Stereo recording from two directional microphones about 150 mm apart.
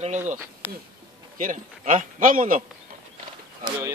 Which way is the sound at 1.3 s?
60° right (ahead or behind).